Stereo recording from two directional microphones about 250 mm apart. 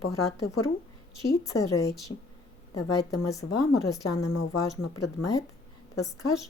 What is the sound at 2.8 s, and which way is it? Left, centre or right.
Speech, left.